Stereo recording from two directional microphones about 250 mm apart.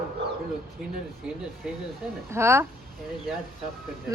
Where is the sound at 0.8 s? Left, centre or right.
Centre.